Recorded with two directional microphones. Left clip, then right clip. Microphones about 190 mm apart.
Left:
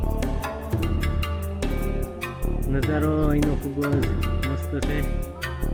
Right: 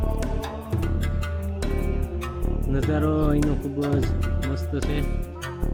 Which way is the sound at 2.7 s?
10° right (ahead or behind).